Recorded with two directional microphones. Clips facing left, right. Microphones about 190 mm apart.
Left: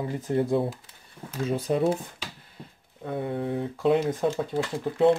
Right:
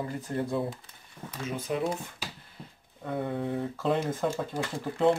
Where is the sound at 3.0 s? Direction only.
5° left (ahead or behind).